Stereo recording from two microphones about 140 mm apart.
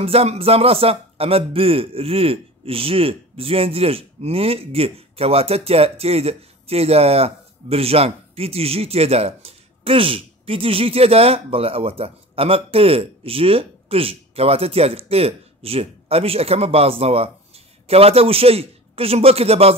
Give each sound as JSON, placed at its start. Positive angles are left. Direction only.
{"t": 0.0, "sound": "speech", "side_deg": -45}